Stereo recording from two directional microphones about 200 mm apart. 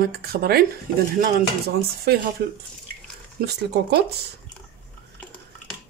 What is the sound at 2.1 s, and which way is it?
Speech, 50° right (ahead or behind).